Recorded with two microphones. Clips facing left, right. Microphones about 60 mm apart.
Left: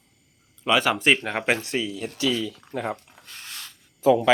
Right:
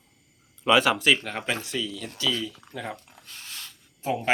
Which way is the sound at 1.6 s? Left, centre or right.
Left.